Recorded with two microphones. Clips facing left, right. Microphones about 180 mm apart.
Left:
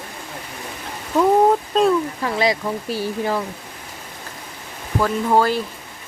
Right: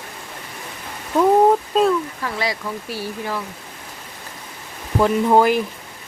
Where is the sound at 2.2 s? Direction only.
20° left (ahead or behind).